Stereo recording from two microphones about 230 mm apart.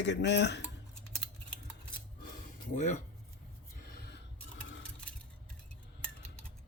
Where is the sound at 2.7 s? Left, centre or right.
Left.